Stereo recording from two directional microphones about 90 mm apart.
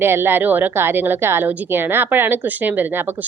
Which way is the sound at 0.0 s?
25° right (ahead or behind).